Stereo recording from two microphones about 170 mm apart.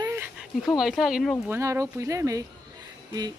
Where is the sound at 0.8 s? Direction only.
5° right (ahead or behind).